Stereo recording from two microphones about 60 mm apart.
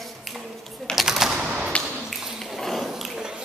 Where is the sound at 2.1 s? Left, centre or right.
Centre.